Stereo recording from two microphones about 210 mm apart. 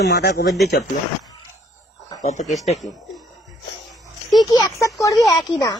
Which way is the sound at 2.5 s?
Centre (ahead or behind).